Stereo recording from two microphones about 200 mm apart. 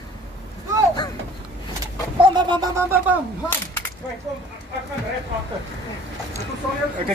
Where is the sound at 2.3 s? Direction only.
20° right (ahead or behind).